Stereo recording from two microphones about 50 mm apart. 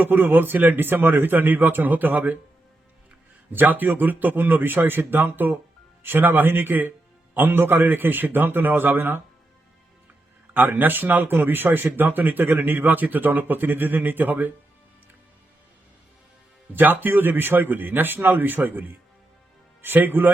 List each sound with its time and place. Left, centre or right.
0.0 s speech: right
3.5 s speech: right
10.5 s speech: right
16.7 s speech: right